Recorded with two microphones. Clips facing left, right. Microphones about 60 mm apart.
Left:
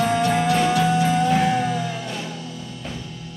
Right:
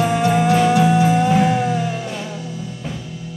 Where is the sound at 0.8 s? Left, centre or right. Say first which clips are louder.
Right 4 dB; right.